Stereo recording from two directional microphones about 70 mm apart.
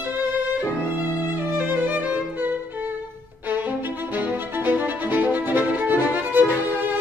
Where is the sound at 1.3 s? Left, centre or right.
Right.